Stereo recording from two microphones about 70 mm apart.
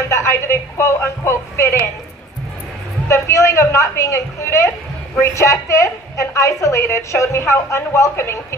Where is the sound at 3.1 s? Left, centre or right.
Left.